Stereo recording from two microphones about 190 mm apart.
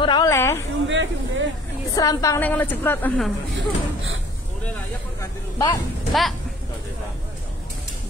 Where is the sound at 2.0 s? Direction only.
20° left (ahead or behind).